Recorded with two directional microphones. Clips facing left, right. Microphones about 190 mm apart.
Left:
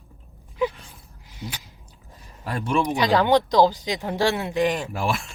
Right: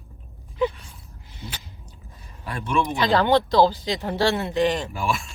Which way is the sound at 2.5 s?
35° left (ahead or behind).